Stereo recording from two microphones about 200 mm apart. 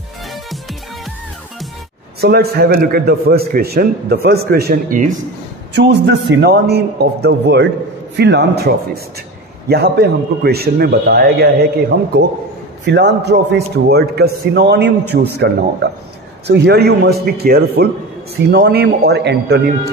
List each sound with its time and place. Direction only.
2.1 s a man's voice: 50° right (ahead or behind)
5.7 s a man's voice: 55° right (ahead or behind)
12.8 s a man's voice: 55° right (ahead or behind)